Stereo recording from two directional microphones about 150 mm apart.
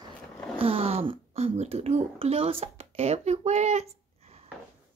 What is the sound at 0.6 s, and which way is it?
A child's voice, 40° right (ahead or behind).